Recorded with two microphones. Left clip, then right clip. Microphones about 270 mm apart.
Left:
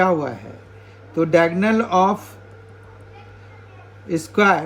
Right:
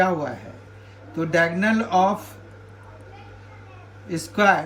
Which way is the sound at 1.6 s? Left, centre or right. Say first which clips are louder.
Left 3 dB; right.